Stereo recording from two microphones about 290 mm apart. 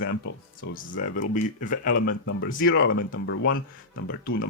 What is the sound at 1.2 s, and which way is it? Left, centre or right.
Speech, left.